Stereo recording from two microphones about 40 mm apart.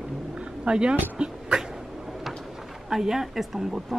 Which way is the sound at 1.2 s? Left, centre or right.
Right.